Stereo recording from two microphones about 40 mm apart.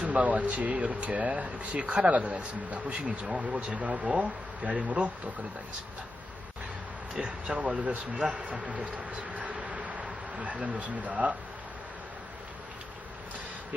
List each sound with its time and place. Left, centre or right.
0.0 s speech: right
7.2 s speech: right